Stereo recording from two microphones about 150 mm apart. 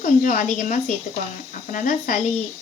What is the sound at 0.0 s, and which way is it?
A woman's voice, 65° left (ahead or behind).